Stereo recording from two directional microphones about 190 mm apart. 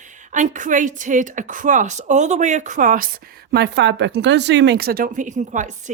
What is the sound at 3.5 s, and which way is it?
A woman's voice, 65° right (ahead or behind).